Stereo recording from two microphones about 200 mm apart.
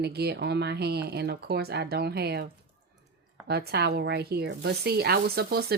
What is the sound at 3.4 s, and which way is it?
Speech, 55° right (ahead or behind).